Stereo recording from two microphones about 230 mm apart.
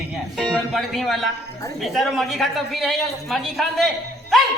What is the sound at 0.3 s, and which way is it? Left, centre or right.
Speech, centre.